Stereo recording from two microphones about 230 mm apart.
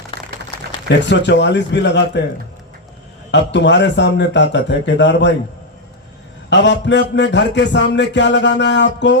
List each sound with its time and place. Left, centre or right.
0.9 s a man's voice: left
3.3 s a man's voice: left
6.5 s a man's voice: left